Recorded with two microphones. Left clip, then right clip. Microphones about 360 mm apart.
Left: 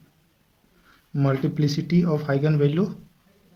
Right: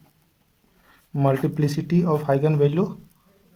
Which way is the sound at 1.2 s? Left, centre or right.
Right.